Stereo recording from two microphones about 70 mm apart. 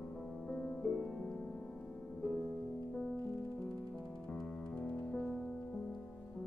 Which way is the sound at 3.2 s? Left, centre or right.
Left.